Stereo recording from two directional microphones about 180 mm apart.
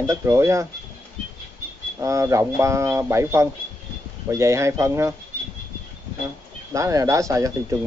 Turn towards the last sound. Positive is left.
turn(degrees=-15)  # may be behind; listen again after turning